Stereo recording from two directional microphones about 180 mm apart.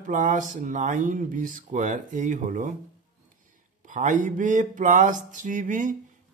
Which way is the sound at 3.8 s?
45° right (ahead or behind).